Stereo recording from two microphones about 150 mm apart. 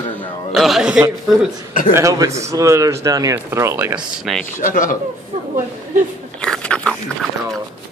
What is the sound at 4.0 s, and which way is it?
Speech, centre (ahead or behind).